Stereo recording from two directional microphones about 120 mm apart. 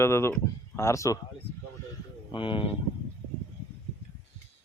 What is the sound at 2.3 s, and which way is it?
Speech, 45° left (ahead or behind).